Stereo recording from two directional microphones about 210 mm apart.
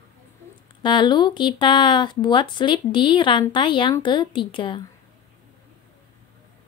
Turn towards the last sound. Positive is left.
turn(degrees=25)  # may be behind; listen again after turning